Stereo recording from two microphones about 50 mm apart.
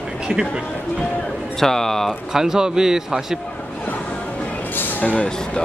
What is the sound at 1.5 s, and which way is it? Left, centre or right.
Speech, centre.